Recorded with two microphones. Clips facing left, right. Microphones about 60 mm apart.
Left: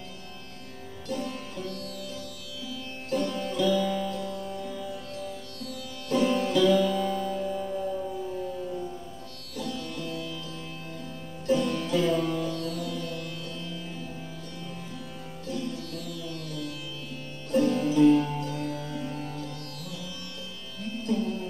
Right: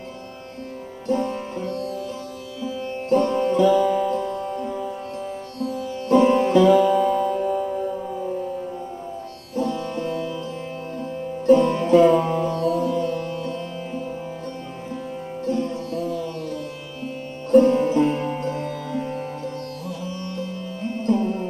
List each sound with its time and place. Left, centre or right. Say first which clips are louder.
1.0 s music: right 10 dB; right
7.4 s music: right 7 dB; centre
9.6 s music: right 10 dB; right
15.4 s music: right 9 dB; right